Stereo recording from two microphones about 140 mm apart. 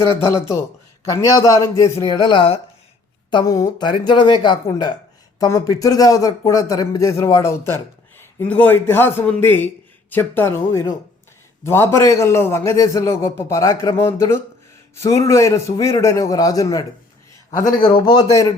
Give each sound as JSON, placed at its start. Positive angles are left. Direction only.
{"t": 0.3, "sound": "speech", "side_deg": 20}
{"t": 2.1, "sound": "speech", "side_deg": 35}